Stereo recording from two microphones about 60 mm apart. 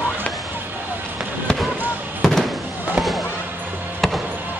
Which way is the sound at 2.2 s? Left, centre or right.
Centre.